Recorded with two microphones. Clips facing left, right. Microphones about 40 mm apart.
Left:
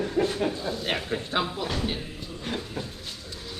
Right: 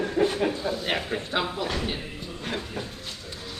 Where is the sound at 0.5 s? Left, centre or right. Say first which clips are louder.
Right 2 dB; centre.